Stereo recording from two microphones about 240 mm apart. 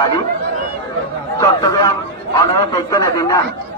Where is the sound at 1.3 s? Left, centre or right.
Centre.